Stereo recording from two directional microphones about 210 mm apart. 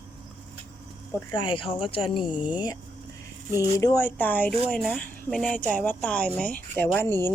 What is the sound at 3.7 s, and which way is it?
Speech, 15° left (ahead or behind).